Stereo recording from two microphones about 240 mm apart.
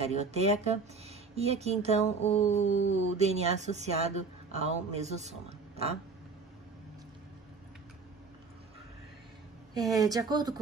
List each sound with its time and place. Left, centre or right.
0.0 s speech: right
2.2 s mantra: left
2.9 s speech: right
9.9 s speech: centre